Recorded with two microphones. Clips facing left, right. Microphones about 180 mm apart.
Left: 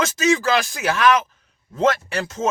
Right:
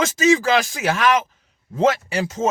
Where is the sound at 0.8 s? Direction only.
20° right (ahead or behind).